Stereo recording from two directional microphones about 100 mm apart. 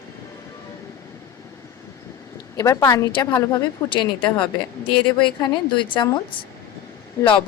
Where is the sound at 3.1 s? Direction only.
45° left (ahead or behind).